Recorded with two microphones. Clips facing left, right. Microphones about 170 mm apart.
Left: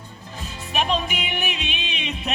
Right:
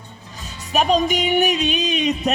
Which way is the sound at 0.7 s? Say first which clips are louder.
Right 7 dB; 40° right (ahead or behind).